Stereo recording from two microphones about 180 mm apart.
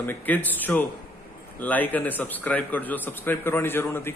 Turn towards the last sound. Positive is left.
turn(degrees=10)  # may be behind; listen again after turning